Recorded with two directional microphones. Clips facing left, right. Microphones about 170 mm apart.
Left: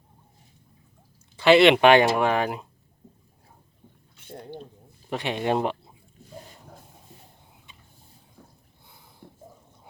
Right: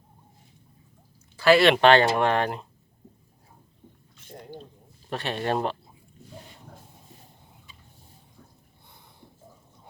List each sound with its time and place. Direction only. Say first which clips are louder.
1.4 s speech: left 2 dB; 20° left (ahead or behind)
5.0 s speech: left 2 dB; 15° left (ahead or behind)
9.2 s a sound: left 6 dB; 55° left (ahead or behind)